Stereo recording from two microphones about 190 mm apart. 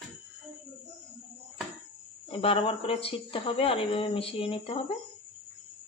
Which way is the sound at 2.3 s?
30° left (ahead or behind).